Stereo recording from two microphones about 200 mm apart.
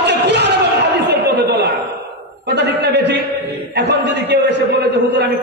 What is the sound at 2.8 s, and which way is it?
A man's voice, 55° right (ahead or behind).